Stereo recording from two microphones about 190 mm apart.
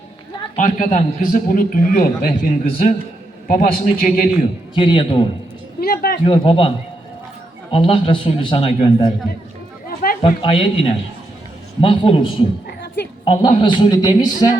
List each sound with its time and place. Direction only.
0.5 s a man's voice: 40° left (ahead or behind)
4.7 s a man's voice: 25° left (ahead or behind)
5.8 s a sound: 50° left (ahead or behind)
6.2 s a man's voice: 30° left (ahead or behind)
10.2 s a man's voice: 30° left (ahead or behind)